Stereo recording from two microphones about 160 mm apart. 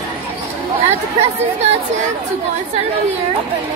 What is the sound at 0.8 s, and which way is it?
Speech, 40° right (ahead or behind).